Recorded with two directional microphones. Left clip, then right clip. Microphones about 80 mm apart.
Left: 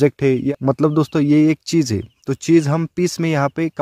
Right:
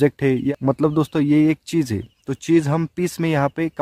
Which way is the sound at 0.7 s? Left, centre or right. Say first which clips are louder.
Left 3 dB; left.